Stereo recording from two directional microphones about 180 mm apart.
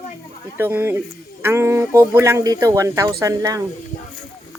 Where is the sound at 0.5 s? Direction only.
15° right (ahead or behind).